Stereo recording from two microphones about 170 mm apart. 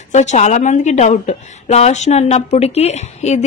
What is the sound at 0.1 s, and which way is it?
A woman's voice, 45° left (ahead or behind).